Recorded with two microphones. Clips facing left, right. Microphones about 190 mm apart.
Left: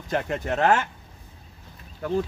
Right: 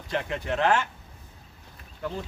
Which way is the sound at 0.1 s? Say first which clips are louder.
Left 3 dB; 45° left (ahead or behind).